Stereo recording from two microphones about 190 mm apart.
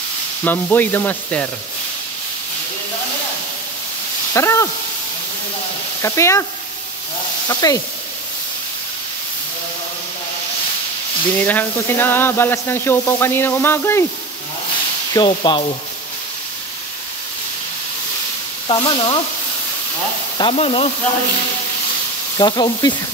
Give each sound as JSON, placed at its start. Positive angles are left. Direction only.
{"t": 0.4, "sound": "speech", "side_deg": 10}
{"t": 4.3, "sound": "speech", "side_deg": 15}
{"t": 6.0, "sound": "speech", "side_deg": 15}
{"t": 7.4, "sound": "frying", "side_deg": 20}
{"t": 11.4, "sound": "speech", "side_deg": 10}
{"t": 15.1, "sound": "frying", "side_deg": 25}
{"t": 18.7, "sound": "frying", "side_deg": 25}
{"t": 20.3, "sound": "frying", "side_deg": 30}
{"t": 22.4, "sound": "frying", "side_deg": 20}